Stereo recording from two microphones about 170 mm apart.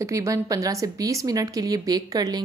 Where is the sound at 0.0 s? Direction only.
20° right (ahead or behind).